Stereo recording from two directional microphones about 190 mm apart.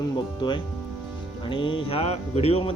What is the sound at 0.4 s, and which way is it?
Speech, 25° left (ahead or behind).